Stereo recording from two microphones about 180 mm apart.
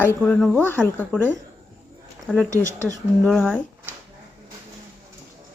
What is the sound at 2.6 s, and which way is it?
Speech, 15° right (ahead or behind).